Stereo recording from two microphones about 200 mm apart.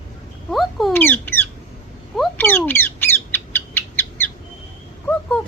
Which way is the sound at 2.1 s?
Centre (ahead or behind).